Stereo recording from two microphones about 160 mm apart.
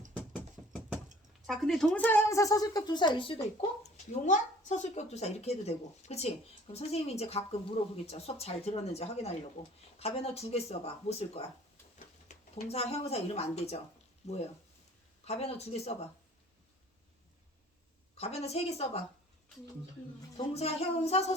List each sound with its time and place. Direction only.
1.5 s speech: centre (ahead or behind); by 3.7 s 30° left (ahead or behind)
3.9 s a woman's voice: 50° left (ahead or behind)
12.3 s a woman's voice: 40° left (ahead or behind)
18.2 s a woman's voice: 40° left (ahead or behind)
20.3 s a woman's voice: 40° left (ahead or behind)